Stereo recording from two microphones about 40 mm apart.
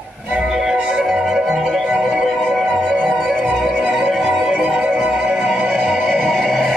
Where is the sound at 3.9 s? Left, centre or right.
Centre.